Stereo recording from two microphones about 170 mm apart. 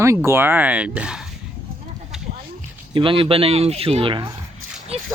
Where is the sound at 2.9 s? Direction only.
30° right (ahead or behind).